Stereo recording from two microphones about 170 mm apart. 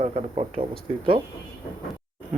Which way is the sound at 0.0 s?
35° right (ahead or behind).